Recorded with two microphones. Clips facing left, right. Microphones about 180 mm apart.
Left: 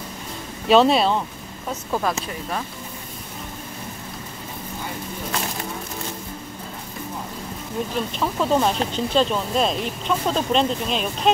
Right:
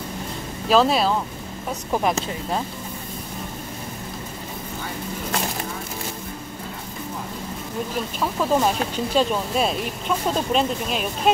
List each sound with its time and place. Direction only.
0.7 s speech: centre (ahead or behind)
1.7 s speech: 15° right (ahead or behind)
8.2 s speech: centre (ahead or behind)